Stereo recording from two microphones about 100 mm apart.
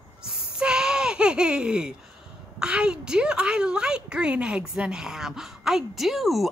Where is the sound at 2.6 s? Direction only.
10° right (ahead or behind).